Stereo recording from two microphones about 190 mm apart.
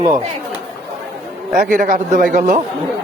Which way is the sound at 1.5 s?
45° right (ahead or behind).